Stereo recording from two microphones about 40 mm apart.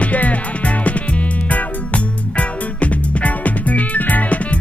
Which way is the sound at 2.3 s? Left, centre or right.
Left.